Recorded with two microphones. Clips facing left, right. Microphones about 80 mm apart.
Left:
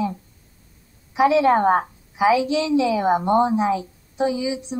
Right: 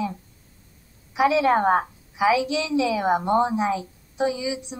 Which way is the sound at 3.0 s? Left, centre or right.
Right.